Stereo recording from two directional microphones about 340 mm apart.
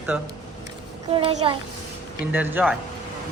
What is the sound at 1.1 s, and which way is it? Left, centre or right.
Speech, centre.